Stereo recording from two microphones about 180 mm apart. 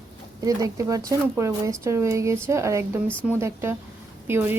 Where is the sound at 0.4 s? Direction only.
20° right (ahead or behind).